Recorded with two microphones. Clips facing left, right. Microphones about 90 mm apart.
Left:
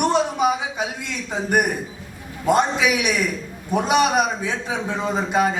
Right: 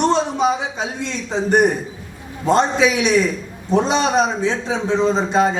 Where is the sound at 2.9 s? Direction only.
25° right (ahead or behind).